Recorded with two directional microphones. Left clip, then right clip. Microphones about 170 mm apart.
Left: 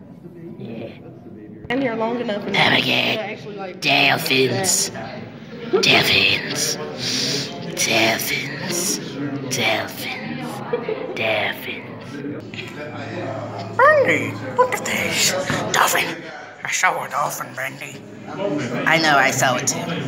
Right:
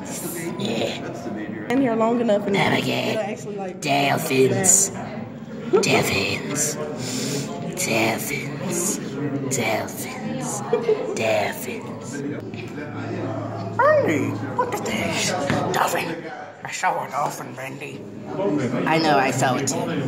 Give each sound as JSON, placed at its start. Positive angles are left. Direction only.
{"t": 0.6, "sound": "music", "side_deg": 0}
{"t": 1.7, "sound": "speech", "side_deg": -60}
{"t": 2.5, "sound": "speech", "side_deg": -5}
{"t": 8.7, "sound": "a sound", "side_deg": -10}
{"t": 9.5, "sound": "speech", "side_deg": -10}
{"t": 11.1, "sound": "speech", "side_deg": -15}
{"t": 13.7, "sound": "a woman's voice", "side_deg": 0}
{"t": 18.9, "sound": "a woman's voice", "side_deg": 0}